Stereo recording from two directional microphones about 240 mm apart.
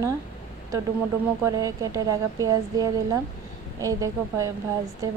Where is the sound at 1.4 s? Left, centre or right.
Centre.